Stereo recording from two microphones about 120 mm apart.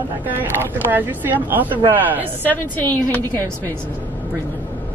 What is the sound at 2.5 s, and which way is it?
A woman's voice, 15° left (ahead or behind).